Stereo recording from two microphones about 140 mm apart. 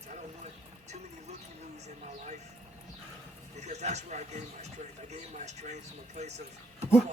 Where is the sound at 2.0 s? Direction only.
55° right (ahead or behind).